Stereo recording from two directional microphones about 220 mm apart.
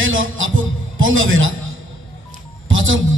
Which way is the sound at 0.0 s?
65° right (ahead or behind).